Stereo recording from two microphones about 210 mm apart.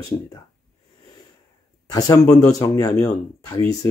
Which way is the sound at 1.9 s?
15° left (ahead or behind).